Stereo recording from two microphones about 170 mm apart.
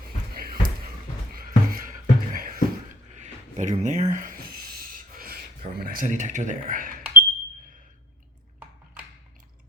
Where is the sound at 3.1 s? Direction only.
45° right (ahead or behind).